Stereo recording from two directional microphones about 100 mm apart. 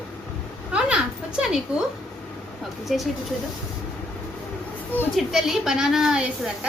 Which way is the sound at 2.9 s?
Centre (ahead or behind).